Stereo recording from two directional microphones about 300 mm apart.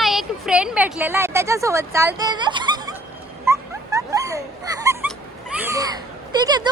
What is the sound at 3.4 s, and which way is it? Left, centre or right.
Dog, centre.